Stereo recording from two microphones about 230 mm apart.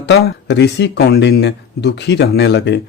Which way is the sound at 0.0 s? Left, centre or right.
Left.